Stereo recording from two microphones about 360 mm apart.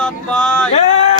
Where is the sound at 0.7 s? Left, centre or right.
Centre.